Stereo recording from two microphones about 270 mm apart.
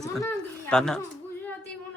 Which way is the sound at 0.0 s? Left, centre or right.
Centre.